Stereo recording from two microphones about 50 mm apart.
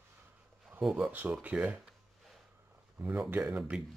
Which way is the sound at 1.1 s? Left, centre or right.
Right.